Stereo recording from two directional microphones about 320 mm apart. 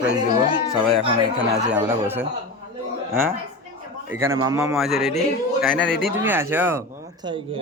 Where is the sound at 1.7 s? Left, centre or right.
Centre.